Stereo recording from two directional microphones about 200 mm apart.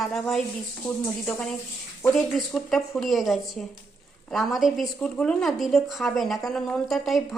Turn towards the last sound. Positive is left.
turn(degrees=0)  # may be behind; listen again after turning